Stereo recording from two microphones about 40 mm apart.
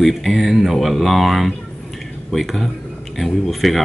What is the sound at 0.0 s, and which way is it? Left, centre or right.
Speech, centre.